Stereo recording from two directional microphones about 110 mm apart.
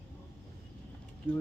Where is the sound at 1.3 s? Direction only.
10° left (ahead or behind).